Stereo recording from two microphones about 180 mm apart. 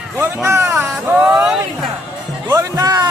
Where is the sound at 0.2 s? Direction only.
15° right (ahead or behind).